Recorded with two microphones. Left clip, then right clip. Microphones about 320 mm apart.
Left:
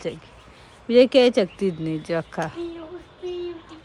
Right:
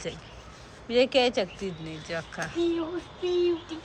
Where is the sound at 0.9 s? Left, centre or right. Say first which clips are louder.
Left 8 dB; centre.